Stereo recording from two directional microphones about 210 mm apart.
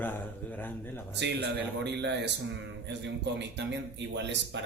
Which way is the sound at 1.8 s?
55° right (ahead or behind).